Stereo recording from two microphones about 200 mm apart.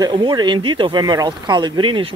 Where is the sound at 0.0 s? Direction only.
20° right (ahead or behind).